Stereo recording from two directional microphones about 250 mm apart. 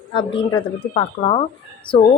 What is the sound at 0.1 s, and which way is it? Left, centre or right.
A woman's voice, centre.